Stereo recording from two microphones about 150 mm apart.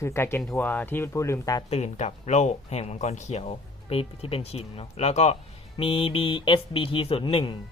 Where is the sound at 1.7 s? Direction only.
45° left (ahead or behind).